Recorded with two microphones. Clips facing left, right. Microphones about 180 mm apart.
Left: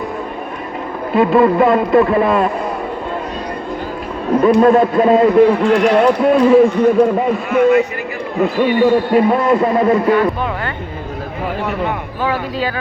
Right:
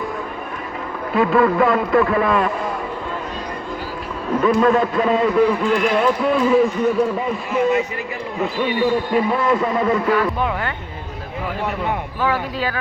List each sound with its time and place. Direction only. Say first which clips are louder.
1.1 s a man's voice: left 4 dB; 20° left (ahead or behind)
4.3 s a man's voice: left 5 dB; 35° left (ahead or behind)
8.4 s a man's voice: left 7 dB; 50° left (ahead or behind); by 10.0 s 35° left (ahead or behind)
10.1 s speech: left 4 dB; 5° right (ahead or behind)